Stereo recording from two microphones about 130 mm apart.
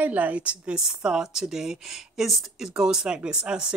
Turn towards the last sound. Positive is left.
turn(degrees=-5)  # may be behind; listen again after turning